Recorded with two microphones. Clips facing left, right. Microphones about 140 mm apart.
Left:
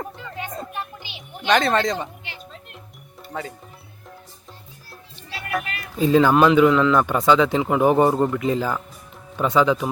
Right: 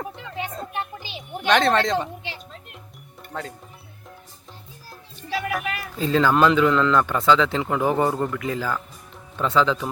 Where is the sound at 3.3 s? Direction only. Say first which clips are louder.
Left 2 dB; 5° left (ahead or behind).